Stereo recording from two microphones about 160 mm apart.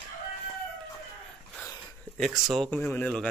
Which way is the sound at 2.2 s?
5° left (ahead or behind).